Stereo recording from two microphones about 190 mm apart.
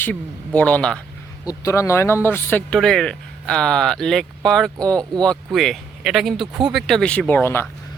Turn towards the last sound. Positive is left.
turn(degrees=10)  # may be behind; listen again after turning